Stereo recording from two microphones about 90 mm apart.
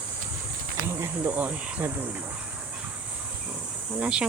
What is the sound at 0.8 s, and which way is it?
Speech, 30° right (ahead or behind).